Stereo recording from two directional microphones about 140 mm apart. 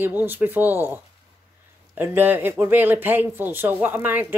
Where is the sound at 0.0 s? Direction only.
15° right (ahead or behind).